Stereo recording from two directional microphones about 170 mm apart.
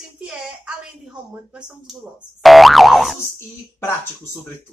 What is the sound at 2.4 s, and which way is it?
Speech, centre (ahead or behind).